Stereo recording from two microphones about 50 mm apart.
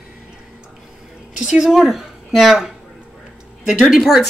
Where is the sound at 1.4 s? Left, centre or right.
Centre.